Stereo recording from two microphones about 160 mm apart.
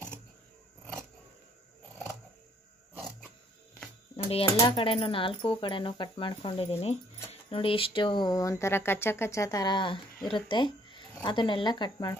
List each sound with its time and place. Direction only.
4.2 s speech: 35° left (ahead or behind)